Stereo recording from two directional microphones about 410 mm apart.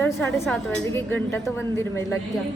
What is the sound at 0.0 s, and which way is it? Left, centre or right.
A woman's voice, centre.